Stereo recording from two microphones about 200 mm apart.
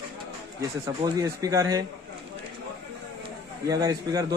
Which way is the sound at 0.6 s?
15° right (ahead or behind).